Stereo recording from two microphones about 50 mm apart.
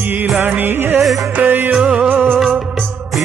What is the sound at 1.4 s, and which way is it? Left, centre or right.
Music, right.